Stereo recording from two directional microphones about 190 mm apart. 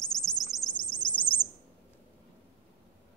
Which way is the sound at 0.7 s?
25° left (ahead or behind).